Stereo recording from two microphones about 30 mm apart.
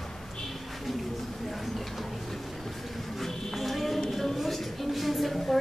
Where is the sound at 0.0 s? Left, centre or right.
Centre.